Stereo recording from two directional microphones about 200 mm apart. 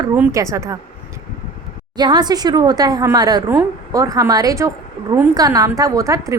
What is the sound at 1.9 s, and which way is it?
A woman's voice, 20° right (ahead or behind).